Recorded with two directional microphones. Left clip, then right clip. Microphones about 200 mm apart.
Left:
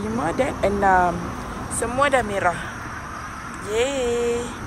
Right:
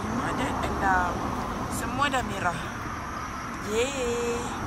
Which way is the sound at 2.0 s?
20° right (ahead or behind).